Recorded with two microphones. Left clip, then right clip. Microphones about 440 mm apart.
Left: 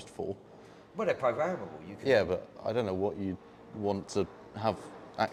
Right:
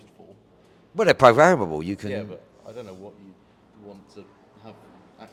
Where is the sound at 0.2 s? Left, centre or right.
Left.